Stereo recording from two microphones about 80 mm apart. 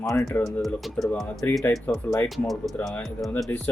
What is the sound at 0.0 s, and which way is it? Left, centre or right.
Speech, left.